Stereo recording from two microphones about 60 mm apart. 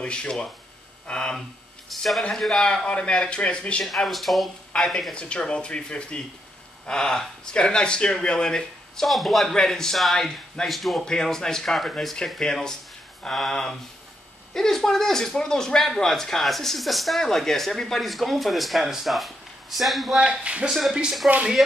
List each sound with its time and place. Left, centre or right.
0.0 s speech: centre
1.9 s speech: centre
2.7 s speech: centre
3.8 s speech: centre
4.7 s speech: centre
20.2 s speech: centre